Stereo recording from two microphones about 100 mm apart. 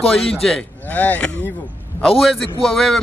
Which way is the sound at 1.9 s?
Centre (ahead or behind).